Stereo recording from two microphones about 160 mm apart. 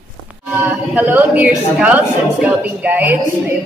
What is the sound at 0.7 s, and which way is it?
Speech, 10° right (ahead or behind).